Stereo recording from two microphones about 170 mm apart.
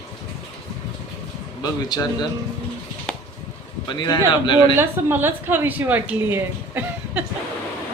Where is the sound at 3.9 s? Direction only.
25° left (ahead or behind).